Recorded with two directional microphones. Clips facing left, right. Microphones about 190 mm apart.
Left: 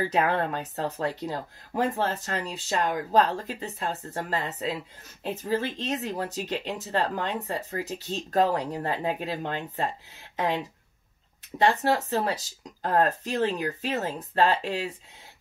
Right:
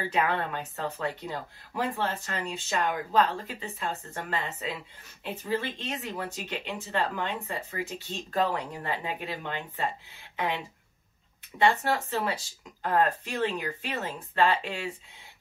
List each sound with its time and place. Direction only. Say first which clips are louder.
0.1 s speech: left 3 dB; 40° left (ahead or behind)